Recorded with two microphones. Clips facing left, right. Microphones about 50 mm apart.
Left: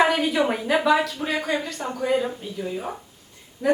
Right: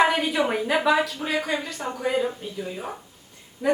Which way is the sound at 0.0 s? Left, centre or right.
Centre.